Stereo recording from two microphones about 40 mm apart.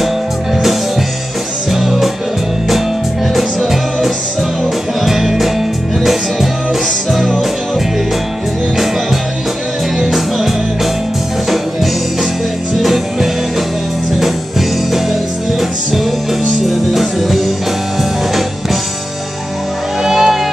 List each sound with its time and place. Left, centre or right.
1.7 s music: centre
3.3 s music: centre
9.9 s music: centre
12.7 s music: centre
16.6 s music: centre
20.0 s music: centre